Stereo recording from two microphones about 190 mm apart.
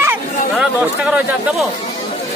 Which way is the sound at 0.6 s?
5° right (ahead or behind).